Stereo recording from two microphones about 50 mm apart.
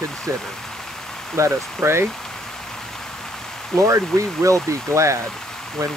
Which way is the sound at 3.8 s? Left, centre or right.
Right.